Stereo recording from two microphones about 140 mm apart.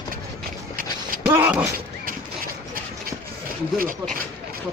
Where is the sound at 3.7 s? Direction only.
85° right.